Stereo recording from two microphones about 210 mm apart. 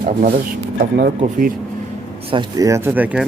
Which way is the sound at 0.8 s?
45° right (ahead or behind).